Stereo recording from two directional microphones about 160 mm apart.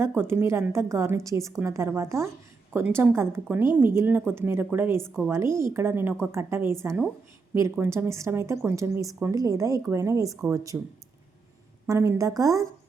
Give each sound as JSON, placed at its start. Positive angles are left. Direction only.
{"t": 0.0, "sound": "a woman's voice", "side_deg": -15}
{"t": 11.9, "sound": "speech", "side_deg": -20}